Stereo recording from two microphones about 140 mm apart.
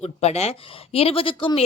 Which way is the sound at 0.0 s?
50° left (ahead or behind).